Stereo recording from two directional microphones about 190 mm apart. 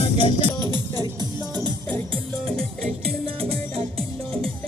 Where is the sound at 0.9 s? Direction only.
20° right (ahead or behind).